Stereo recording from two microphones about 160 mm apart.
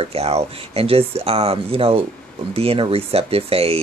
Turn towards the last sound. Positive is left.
turn(degrees=-40)  # may be behind; listen again after turning